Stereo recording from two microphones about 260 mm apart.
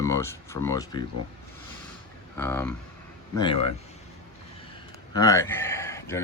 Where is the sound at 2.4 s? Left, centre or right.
Centre.